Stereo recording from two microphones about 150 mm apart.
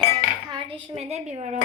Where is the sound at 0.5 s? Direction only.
40° right (ahead or behind).